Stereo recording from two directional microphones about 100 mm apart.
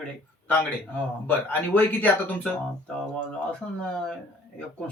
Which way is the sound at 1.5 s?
20° left (ahead or behind).